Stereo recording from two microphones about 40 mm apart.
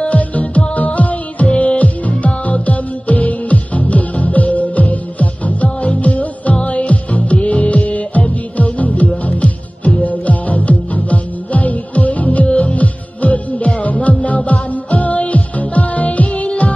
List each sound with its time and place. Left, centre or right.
0.0 s music: left